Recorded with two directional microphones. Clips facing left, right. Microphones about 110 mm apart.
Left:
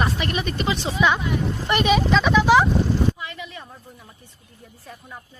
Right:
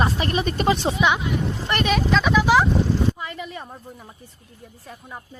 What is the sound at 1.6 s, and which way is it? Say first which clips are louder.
Speech: left 3 dB; 5° left (ahead or behind).